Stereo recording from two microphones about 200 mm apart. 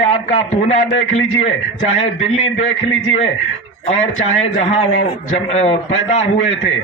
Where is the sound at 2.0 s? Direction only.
30° left (ahead or behind).